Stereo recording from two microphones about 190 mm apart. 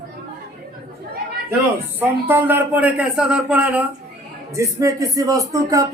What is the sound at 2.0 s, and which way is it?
A man's voice, 10° right (ahead or behind).